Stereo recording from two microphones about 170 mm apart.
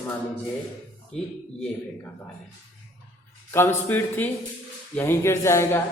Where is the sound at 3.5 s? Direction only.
10° left (ahead or behind).